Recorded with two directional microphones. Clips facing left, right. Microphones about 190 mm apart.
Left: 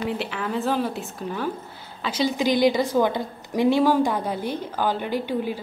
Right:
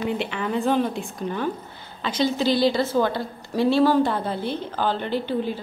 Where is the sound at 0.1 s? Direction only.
Centre (ahead or behind).